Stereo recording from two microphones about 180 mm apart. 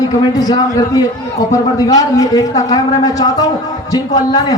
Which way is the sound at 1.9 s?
20° left (ahead or behind).